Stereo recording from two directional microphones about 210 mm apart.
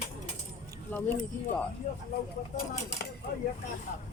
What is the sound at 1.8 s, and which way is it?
Speech, 40° left (ahead or behind).